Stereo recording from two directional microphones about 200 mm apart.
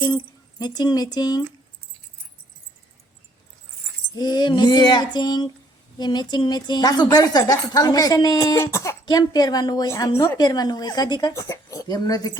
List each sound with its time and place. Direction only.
0.6 s speech: 20° left (ahead or behind)
4.1 s speech: 20° left (ahead or behind)